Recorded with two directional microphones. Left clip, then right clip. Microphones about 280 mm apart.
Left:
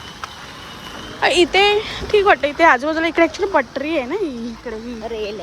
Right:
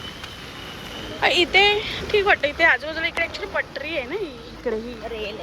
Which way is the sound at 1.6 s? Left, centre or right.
Centre.